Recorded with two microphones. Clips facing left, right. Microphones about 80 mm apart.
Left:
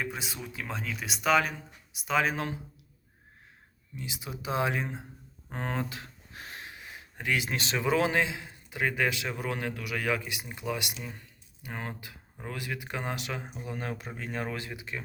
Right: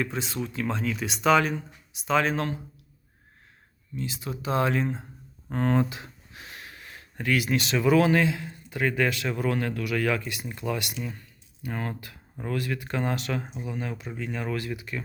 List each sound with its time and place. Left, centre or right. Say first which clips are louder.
0.0 s speech: right 6 dB; centre
3.9 s speech: right 6 dB; centre
6.3 s a sound: left 2 dB; left
6.6 s speech: even; centre
13.7 s speech: right 3 dB; left
14.5 s speech: right 6 dB; left